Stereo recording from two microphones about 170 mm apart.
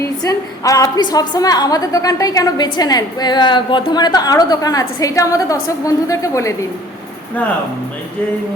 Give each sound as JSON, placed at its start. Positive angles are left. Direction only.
{"t": 0.0, "sound": "a woman's voice", "side_deg": 20}